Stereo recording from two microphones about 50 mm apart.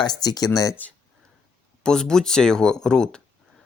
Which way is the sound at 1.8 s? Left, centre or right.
Centre.